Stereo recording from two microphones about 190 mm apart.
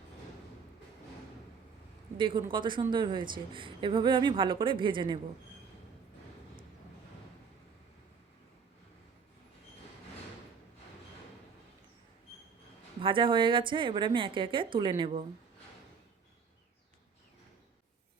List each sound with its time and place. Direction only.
2.1 s a woman's voice: 25° right (ahead or behind)
13.0 s a woman's voice: 25° right (ahead or behind)